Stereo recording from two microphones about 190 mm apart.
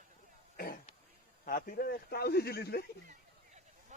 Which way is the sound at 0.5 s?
50° left (ahead or behind).